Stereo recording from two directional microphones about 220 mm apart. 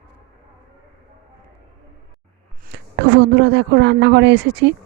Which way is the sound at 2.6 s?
50° right (ahead or behind).